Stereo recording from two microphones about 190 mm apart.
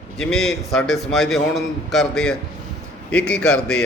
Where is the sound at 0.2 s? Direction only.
Centre (ahead or behind).